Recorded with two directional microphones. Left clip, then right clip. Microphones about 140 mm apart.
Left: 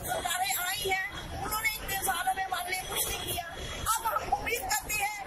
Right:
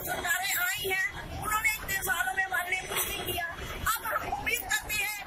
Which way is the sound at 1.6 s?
10° right (ahead or behind).